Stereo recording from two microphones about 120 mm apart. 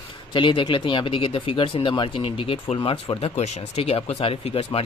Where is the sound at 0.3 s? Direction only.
40° left (ahead or behind).